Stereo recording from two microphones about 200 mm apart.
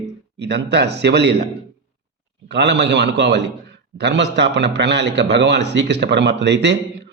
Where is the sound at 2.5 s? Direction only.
60° right (ahead or behind).